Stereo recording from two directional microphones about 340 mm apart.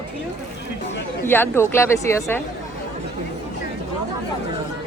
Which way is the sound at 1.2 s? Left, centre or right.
Centre.